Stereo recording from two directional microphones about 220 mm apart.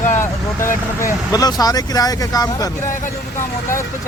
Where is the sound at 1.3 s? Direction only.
15° left (ahead or behind).